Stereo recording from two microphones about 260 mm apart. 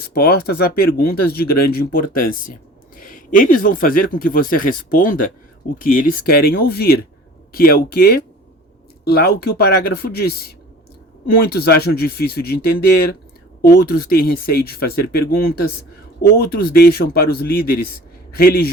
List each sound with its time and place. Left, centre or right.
0.1 s a man's voice: left